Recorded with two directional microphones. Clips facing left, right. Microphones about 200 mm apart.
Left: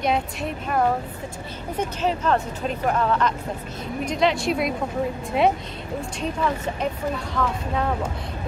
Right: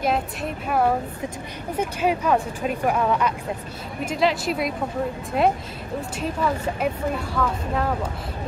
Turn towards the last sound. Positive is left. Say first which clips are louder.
# even
turn(degrees=0)  # may be behind; listen again after turning